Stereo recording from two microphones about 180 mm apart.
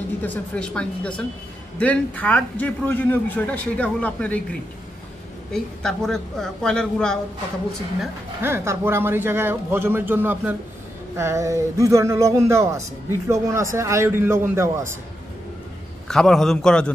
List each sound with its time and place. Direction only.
0.2 s a man's voice: 5° left (ahead or behind)
5.5 s a woman's voice: 5° left (ahead or behind)
8.0 s speech: 10° right (ahead or behind)
16.1 s a woman's voice: 5° left (ahead or behind)